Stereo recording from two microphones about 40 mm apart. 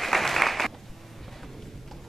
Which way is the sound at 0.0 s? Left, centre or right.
Centre.